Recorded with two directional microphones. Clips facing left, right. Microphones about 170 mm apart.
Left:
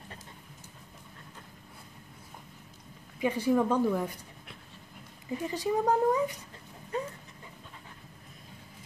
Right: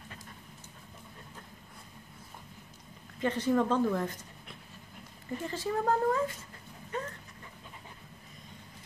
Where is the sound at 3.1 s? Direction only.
10° left (ahead or behind).